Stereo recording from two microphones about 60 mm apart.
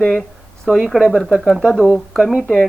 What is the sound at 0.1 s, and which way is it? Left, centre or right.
Speech, centre.